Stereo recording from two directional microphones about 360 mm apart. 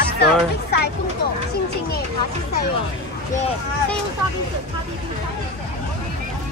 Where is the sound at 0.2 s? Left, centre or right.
Left.